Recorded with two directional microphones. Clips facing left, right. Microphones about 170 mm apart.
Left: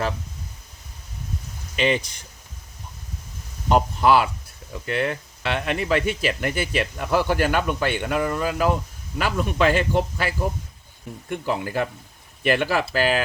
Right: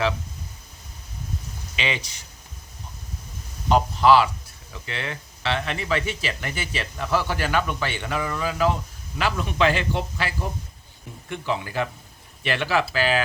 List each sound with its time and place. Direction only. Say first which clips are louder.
1.7 s speech: left 7 dB; 45° left (ahead or behind)
3.7 s speech: right 1 dB; 50° left (ahead or behind)